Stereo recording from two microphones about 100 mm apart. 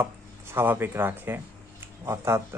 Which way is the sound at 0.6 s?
20° right (ahead or behind).